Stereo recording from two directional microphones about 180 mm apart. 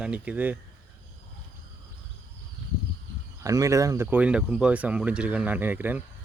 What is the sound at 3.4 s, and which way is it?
Speech, 20° right (ahead or behind).